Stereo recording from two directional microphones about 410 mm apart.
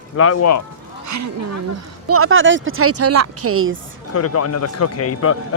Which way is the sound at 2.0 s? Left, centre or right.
Right.